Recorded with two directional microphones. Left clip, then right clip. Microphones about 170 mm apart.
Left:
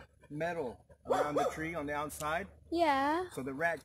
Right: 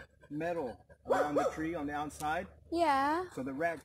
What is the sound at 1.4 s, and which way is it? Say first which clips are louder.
Speech: right 1 dB; 25° left (ahead or behind).